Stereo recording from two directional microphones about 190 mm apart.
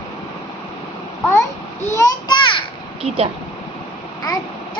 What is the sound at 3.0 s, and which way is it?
Speech, 30° right (ahead or behind).